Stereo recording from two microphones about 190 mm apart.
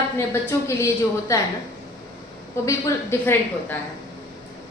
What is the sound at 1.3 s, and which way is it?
Speech, 15° left (ahead or behind).